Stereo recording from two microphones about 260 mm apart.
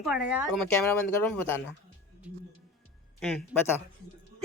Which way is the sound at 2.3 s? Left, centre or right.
Centre.